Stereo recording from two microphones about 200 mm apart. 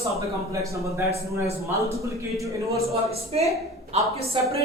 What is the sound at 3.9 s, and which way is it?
Speech, 30° right (ahead or behind).